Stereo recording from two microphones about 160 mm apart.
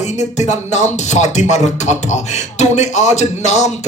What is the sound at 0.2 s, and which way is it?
Speech, 45° left (ahead or behind).